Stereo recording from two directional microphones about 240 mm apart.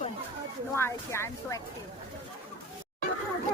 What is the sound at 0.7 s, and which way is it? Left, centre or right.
Speech, centre.